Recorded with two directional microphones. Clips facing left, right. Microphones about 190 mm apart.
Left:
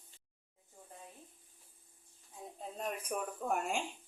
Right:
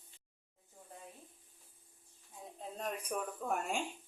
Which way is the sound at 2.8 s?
5° left (ahead or behind).